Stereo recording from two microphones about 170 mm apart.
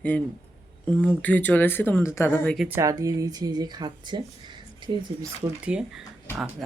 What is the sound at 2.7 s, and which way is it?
Speech, 20° right (ahead or behind).